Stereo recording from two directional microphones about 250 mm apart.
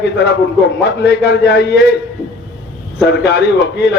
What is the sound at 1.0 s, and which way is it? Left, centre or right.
Speech, left.